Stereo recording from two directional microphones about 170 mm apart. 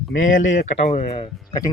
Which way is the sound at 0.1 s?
50° left (ahead or behind).